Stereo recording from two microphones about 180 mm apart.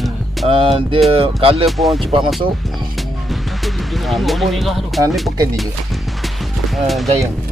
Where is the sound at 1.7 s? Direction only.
Centre (ahead or behind).